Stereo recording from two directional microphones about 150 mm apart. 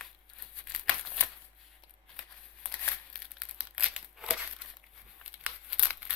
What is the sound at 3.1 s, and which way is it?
Crumpling, 5° right (ahead or behind).